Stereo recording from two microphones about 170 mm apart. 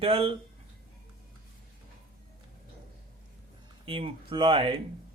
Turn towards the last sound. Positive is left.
turn(degrees=-30)  # may be behind; listen again after turning